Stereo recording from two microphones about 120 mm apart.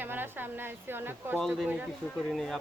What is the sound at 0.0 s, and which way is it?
A woman's voice, 15° right (ahead or behind).